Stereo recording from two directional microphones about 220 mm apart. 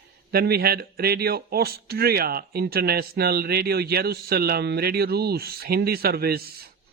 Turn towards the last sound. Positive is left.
turn(degrees=-45)  # may be behind; listen again after turning